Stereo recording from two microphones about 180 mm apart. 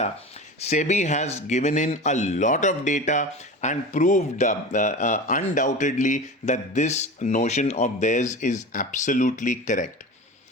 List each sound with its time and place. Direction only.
0.6 s speech: 40° left (ahead or behind)